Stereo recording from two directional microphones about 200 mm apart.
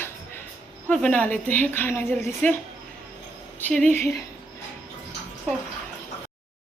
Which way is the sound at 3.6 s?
5° left (ahead or behind).